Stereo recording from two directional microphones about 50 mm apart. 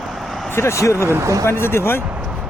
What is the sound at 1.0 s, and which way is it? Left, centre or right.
Speech, right.